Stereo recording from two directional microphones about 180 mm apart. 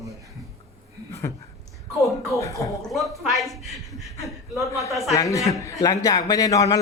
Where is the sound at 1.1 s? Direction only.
15° left (ahead or behind).